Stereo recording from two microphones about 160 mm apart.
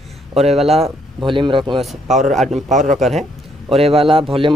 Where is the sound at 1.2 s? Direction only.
30° right (ahead or behind).